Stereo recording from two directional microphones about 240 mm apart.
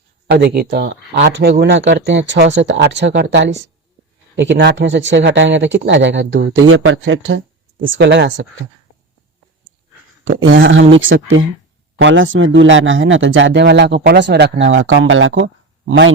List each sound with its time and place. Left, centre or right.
0.3 s speech: right
10.2 s a man's voice: right